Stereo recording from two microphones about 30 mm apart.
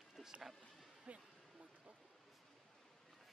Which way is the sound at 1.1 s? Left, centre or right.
Right.